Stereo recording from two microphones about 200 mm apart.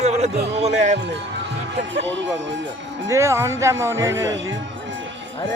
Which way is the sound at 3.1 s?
15° right (ahead or behind).